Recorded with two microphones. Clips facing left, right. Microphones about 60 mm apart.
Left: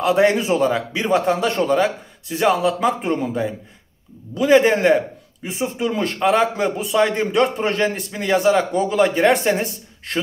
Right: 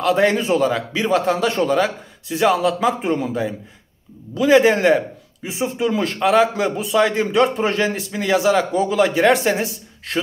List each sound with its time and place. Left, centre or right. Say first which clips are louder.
0.0 s a man's voice: left 1 dB; centre